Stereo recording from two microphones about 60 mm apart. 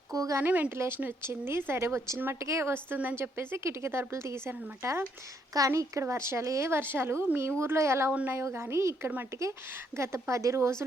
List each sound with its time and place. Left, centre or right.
0.1 s speech: right
0.4 s a woman's voice: right
3.3 s a woman's voice: right
5.5 s a woman's voice: right